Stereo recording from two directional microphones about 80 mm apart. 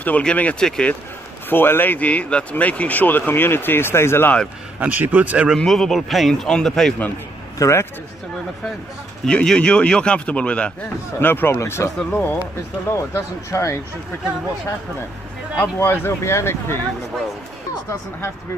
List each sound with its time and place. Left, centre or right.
0.0 s speech: centre
1.5 s speech: left
4.7 s speech: centre
5.6 s speech: centre
7.5 s speech: left
9.2 s speech: centre
11.1 s speech: left
12.1 s speech: left
13.1 s speech: left
15.5 s speech: left